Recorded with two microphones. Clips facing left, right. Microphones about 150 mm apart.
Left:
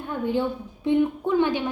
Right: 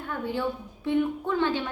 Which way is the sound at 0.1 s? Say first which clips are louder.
Left 6 dB; 20° left (ahead or behind).